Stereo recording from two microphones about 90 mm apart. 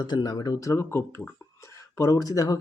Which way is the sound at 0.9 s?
25° left (ahead or behind).